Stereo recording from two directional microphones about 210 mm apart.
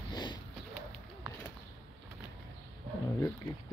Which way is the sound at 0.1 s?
20° left (ahead or behind).